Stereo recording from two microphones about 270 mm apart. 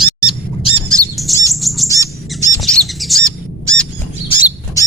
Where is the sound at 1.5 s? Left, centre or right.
Centre.